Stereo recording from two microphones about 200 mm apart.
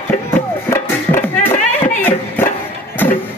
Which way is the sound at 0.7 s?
10° left (ahead or behind).